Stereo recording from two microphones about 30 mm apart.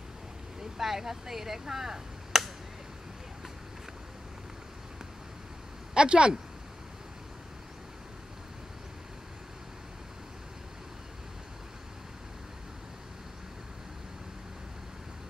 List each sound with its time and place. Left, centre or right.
0.6 s gunshot: centre
5.9 s speech: right